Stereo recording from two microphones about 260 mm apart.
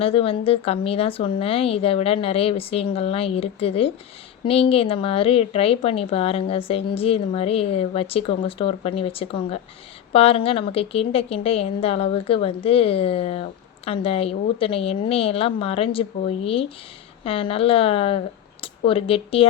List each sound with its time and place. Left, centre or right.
0.0 s a woman's voice: left